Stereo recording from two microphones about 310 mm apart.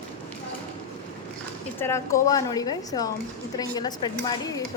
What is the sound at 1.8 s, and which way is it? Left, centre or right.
A woman's voice, centre.